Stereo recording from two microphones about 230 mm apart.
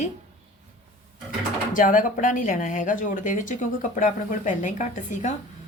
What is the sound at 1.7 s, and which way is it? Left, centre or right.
Speech, left.